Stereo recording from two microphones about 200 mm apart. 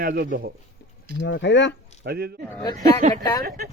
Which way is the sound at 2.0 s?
50° right (ahead or behind).